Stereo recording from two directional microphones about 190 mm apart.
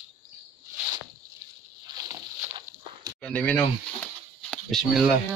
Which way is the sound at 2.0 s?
20° right (ahead or behind).